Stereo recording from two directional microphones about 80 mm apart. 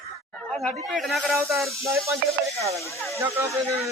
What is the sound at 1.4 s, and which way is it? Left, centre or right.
Music, right.